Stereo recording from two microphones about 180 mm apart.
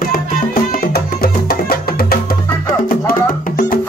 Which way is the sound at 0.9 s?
60° left (ahead or behind).